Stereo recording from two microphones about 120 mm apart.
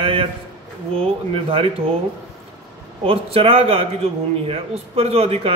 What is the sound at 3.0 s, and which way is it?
A man's voice, 55° right (ahead or behind).